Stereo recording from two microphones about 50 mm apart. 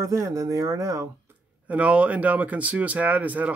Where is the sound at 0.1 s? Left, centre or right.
Right.